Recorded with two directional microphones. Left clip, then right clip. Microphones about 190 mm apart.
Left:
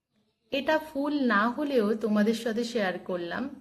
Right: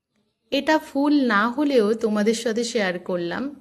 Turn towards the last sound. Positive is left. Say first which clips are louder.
# right 6 dB
turn(degrees=-40)  # may be behind; listen again after turning